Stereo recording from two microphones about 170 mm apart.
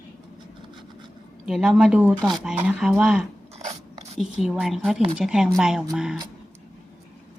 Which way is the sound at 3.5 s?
35° right (ahead or behind).